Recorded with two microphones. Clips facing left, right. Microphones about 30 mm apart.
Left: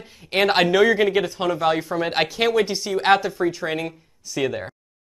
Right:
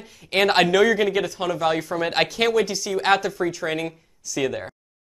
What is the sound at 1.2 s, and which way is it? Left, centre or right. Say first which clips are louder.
Speech: left 2 dB; left.